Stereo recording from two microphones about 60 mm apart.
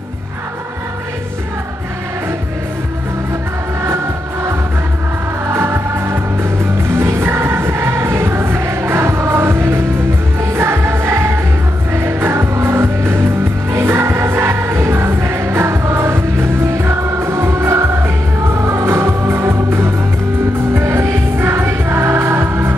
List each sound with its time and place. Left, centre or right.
3.8 s music: right